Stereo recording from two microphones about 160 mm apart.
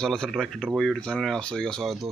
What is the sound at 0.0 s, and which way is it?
Speech, 5° left (ahead or behind).